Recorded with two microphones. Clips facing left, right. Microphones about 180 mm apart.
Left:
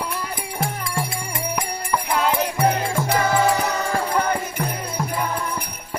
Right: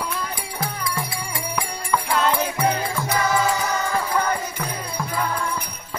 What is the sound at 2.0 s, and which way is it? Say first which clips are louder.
Music: even; 15° left (ahead or behind).